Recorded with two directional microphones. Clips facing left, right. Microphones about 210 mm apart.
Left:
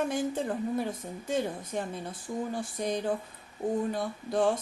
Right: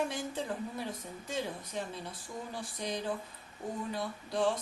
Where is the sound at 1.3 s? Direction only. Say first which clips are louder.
Left 6 dB; 50° left (ahead or behind).